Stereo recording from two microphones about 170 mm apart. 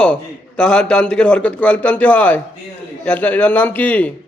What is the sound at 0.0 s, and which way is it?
A man's voice, 5° left (ahead or behind).